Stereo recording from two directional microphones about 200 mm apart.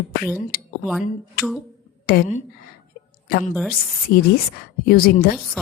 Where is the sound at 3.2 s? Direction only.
50° left (ahead or behind).